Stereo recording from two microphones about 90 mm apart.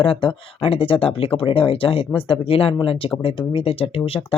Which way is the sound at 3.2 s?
70° left (ahead or behind).